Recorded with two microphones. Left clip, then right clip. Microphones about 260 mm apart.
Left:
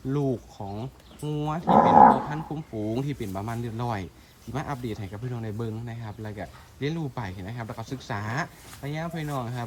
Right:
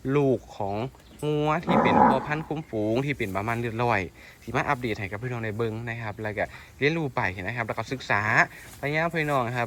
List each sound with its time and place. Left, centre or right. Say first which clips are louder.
0.1 s speech: right 5 dB; centre
1.6 s speech: left 6 dB; left
2.3 s speech: right 5 dB; centre